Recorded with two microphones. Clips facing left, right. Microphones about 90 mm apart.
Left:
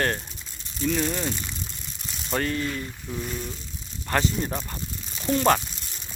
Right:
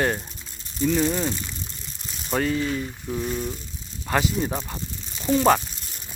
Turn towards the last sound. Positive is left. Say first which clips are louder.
# right 2 dB
turn(degrees=-5)  # may be behind; listen again after turning